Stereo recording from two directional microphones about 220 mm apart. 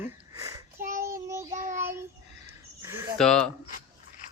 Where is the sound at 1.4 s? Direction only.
35° right (ahead or behind).